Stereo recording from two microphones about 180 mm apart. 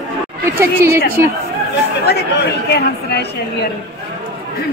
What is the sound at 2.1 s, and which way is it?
Speech, 65° left (ahead or behind).